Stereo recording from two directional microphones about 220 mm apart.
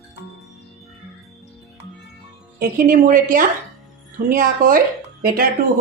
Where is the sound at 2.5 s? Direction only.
40° right (ahead or behind).